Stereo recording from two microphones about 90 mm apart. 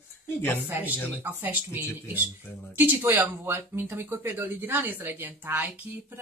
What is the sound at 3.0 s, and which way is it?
Speech, 30° right (ahead or behind).